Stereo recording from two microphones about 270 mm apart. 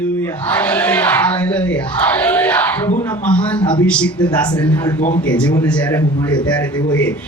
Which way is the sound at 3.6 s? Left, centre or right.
Centre.